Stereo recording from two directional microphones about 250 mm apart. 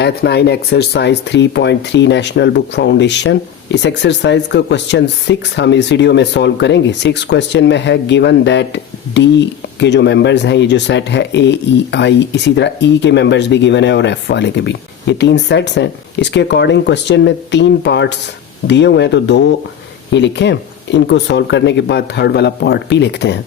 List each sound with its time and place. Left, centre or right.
0.0 s speech: left